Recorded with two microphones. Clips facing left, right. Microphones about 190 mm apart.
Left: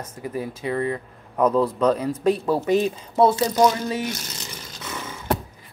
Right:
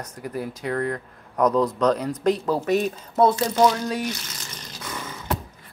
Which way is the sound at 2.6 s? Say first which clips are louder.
Left 2 dB; 30° left (ahead or behind).